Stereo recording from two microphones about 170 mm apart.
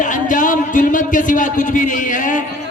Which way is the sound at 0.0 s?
50° left (ahead or behind).